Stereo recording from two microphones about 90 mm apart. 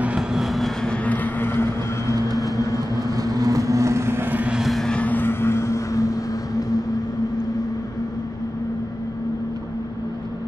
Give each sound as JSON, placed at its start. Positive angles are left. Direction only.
{"t": 0.0, "sound": "vehicle", "side_deg": -10}
{"t": 0.9, "sound": "vehicle", "side_deg": 15}
{"t": 2.5, "sound": "vehicle", "side_deg": 40}
{"t": 3.0, "sound": "vehicle", "side_deg": -45}
{"t": 4.6, "sound": "vehicle", "side_deg": 0}